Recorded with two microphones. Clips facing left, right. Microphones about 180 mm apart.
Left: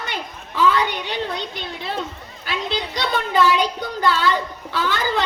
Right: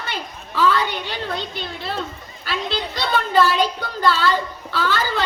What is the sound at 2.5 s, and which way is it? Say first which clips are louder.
A woman's voice: even; 15° left (ahead or behind).